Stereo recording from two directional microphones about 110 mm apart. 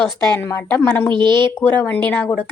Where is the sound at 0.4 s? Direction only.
20° left (ahead or behind).